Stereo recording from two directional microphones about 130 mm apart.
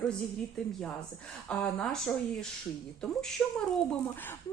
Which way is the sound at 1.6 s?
10° left (ahead or behind).